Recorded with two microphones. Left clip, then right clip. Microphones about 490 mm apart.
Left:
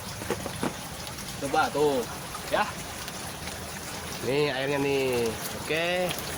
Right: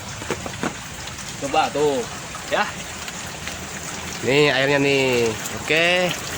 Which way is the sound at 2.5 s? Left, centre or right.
Left.